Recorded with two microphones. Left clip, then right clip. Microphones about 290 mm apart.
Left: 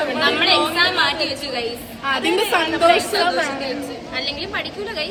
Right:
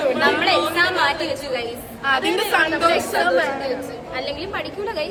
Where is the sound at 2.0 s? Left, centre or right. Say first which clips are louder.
Right 1 dB; centre.